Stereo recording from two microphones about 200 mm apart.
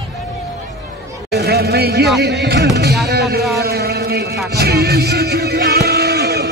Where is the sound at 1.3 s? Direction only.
55° right (ahead or behind).